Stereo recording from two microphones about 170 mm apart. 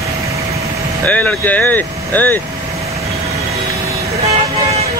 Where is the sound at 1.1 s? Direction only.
10° left (ahead or behind).